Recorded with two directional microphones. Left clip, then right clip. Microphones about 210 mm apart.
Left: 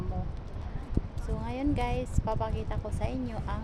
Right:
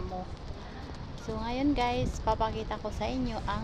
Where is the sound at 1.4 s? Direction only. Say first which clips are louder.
Right 3 dB; 15° right (ahead or behind).